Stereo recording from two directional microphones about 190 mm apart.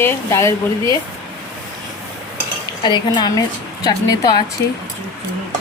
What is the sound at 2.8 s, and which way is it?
A woman's voice, 25° left (ahead or behind).